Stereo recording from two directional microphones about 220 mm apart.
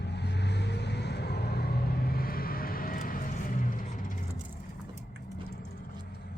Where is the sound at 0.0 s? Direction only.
50° left (ahead or behind).